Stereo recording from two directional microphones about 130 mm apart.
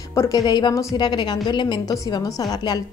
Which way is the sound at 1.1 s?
35° left (ahead or behind).